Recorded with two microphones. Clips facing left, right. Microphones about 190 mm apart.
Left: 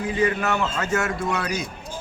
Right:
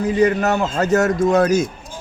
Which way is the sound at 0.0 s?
40° right (ahead or behind).